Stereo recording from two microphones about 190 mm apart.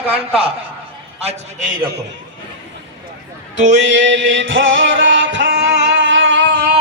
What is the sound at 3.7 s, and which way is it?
Music, 75° right (ahead or behind).